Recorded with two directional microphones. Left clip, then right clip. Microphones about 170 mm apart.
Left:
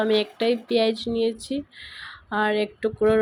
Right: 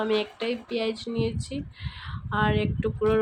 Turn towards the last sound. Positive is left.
turn(degrees=20)  # may be behind; listen again after turning